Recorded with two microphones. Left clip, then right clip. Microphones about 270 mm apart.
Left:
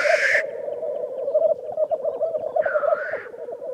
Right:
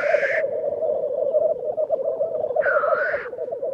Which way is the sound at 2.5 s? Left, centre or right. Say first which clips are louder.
Right 1 dB; right.